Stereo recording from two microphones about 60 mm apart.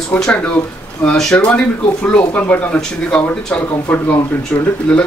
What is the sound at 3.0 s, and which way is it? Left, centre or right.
Speech, centre.